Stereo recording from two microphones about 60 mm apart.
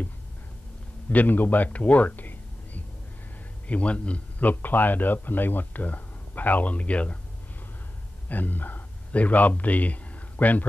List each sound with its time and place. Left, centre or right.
1.1 s a man's voice: left
8.3 s a man's voice: left